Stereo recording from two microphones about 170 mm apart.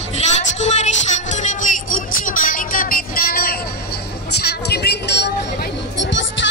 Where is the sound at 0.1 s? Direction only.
45° left (ahead or behind); by 3.5 s 60° left (ahead or behind).